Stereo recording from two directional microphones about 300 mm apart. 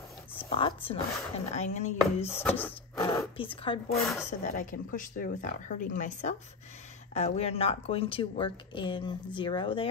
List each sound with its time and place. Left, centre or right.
0.4 s speech: centre
2.4 s speech: centre
3.2 s speech: centre
4.0 s speech: centre
4.3 s speech: left